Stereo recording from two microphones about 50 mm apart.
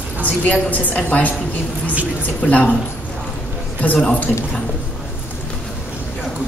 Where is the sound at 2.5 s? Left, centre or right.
Left.